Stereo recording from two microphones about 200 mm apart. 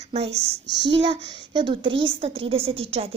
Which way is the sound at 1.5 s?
25° right (ahead or behind).